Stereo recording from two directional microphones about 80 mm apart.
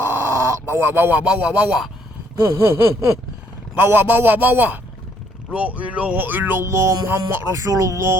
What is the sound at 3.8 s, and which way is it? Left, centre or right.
Speech, right.